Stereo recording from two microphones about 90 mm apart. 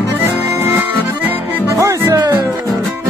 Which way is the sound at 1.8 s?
35° right (ahead or behind).